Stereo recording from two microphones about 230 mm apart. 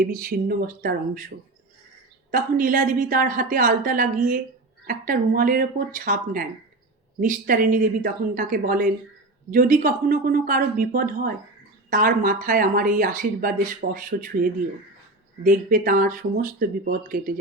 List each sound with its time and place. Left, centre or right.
0.0 s speech: right
2.3 s speech: right
15.4 s speech: right